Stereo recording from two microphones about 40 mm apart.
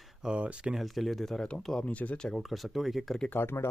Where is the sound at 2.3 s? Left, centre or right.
Centre.